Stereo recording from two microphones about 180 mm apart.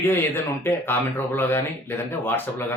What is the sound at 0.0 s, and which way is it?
Speech, 10° left (ahead or behind).